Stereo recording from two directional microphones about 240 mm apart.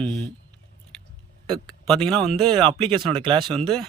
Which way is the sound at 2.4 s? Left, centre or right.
Right.